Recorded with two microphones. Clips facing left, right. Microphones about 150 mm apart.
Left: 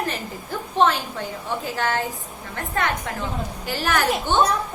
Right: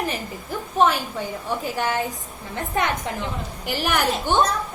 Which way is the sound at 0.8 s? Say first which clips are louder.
Even; 10° right (ahead or behind).